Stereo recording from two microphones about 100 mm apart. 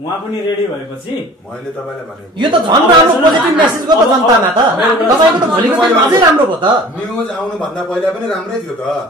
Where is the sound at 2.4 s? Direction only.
45° right (ahead or behind).